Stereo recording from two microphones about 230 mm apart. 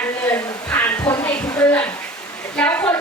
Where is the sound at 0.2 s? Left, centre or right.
Centre.